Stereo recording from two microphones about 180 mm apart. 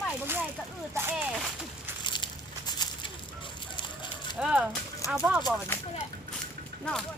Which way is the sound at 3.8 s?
25° left (ahead or behind).